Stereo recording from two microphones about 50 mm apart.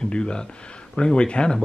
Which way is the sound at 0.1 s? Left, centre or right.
Centre.